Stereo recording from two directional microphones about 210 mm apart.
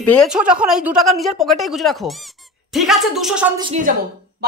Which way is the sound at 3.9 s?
40° right (ahead or behind).